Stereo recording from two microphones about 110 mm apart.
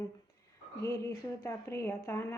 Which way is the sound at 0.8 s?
30° left (ahead or behind).